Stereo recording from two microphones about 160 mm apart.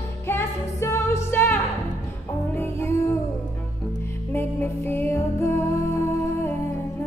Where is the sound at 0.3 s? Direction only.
15° left (ahead or behind).